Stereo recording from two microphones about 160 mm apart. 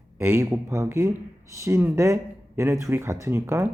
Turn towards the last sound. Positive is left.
turn(degrees=-15)  # may be behind; listen again after turning